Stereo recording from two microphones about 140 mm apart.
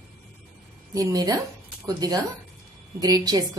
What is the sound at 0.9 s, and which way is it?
A woman's voice, 25° right (ahead or behind).